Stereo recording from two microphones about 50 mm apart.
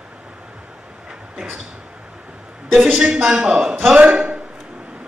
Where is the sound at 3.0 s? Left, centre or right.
Centre.